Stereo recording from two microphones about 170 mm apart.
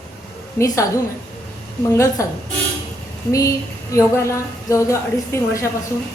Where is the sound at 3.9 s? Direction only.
15° left (ahead or behind).